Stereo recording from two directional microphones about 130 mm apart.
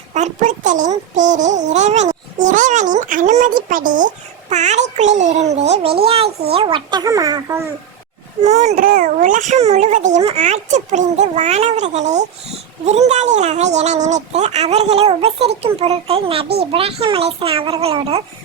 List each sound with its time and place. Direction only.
0.1 s a child's voice: 70° right (ahead or behind)
3.7 s a child's voice: 90° right; by 7.7 s 20° right (ahead or behind)
8.4 s a child's voice: 60° right (ahead or behind)